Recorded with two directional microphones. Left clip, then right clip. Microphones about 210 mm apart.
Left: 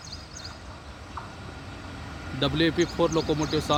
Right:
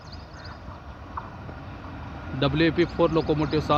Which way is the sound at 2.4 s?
5° left (ahead or behind).